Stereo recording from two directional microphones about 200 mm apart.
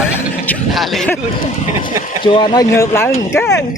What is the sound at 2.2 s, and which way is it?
Speech, 25° left (ahead or behind).